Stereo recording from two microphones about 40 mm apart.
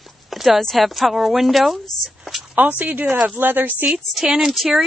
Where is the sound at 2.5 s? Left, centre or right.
Right.